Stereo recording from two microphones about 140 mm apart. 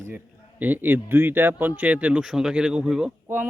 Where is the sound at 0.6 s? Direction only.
15° right (ahead or behind).